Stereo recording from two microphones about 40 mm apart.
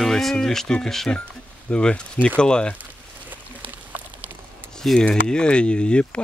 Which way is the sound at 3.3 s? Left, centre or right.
Right.